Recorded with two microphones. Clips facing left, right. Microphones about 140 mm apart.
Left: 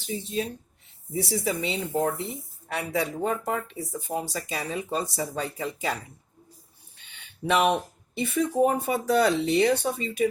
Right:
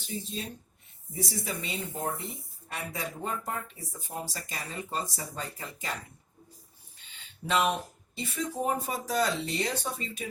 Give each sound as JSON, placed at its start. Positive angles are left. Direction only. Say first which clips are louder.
{"t": 0.0, "sound": "speech", "louder": "left 7 dB", "side_deg": 70}
{"t": 7.0, "sound": "speech", "louder": "left 8 dB", "side_deg": 70}